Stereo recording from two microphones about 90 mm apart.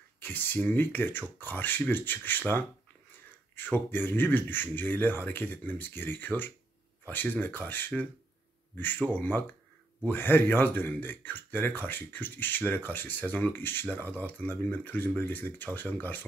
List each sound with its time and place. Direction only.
0.2 s speech: 20° left (ahead or behind)